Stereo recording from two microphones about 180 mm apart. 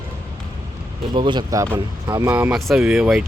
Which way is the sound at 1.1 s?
25° right (ahead or behind).